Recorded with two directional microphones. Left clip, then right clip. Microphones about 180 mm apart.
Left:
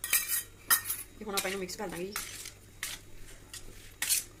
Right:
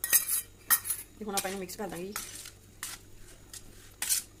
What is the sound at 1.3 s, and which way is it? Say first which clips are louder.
Speech: left 1 dB; 40° right (ahead or behind).